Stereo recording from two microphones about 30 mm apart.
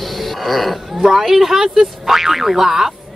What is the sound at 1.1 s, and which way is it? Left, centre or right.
A woman's voice, centre.